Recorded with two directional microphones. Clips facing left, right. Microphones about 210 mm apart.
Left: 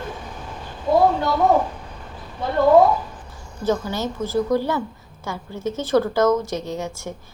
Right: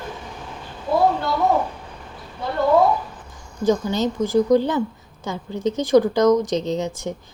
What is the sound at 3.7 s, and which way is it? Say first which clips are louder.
A woman's voice: right 3 dB; 15° right (ahead or behind).